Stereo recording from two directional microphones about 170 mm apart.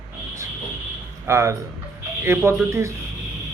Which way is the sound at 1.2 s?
15° right (ahead or behind).